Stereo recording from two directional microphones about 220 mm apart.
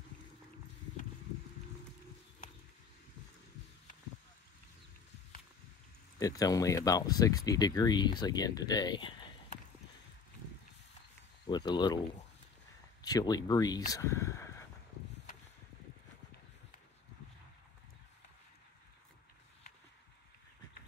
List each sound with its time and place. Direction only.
6.1 s speech: 15° left (ahead or behind)
11.4 s speech: 20° left (ahead or behind)
13.0 s speech: 15° left (ahead or behind)